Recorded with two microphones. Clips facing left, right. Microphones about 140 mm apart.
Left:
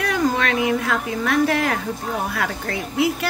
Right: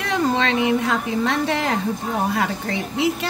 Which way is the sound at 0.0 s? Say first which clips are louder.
Even; 25° right (ahead or behind).